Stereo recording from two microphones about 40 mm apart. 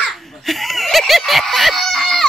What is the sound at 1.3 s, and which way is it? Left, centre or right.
Chicken, centre.